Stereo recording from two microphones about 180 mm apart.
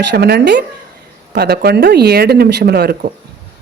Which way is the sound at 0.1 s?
65° right (ahead or behind).